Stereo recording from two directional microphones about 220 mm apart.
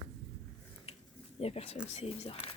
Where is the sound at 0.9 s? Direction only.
25° left (ahead or behind).